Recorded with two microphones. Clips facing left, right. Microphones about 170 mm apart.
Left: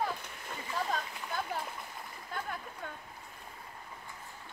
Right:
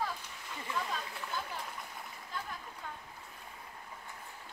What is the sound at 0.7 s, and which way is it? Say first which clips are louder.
Splash: left 3 dB; 50° left (ahead or behind).